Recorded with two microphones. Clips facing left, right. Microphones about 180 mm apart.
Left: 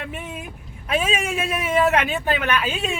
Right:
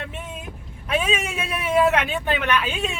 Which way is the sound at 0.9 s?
40° left (ahead or behind).